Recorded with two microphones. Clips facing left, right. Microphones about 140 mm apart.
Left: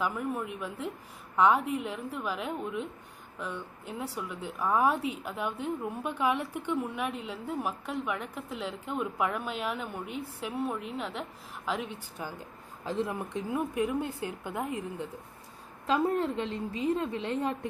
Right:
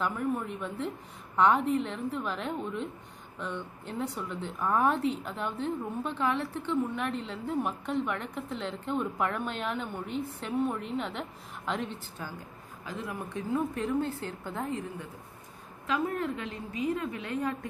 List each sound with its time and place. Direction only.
0.0 s a woman's voice: 5° left (ahead or behind)
12.2 s a woman's voice: 15° left (ahead or behind)
12.8 s a woman's voice: 30° left (ahead or behind)
15.9 s a woman's voice: 30° left (ahead or behind)